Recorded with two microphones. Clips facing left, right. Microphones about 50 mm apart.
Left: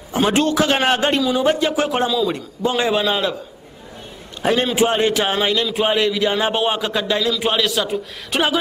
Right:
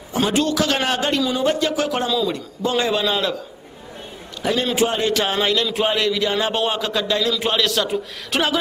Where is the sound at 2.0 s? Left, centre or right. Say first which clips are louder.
Left 2 dB; centre.